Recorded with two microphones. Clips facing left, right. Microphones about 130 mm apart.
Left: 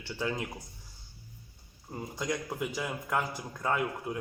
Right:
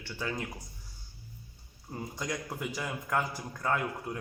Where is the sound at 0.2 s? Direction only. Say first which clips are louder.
Left 3 dB; 20° left (ahead or behind).